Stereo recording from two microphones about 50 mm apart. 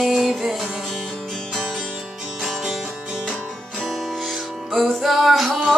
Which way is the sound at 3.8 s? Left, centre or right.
Centre.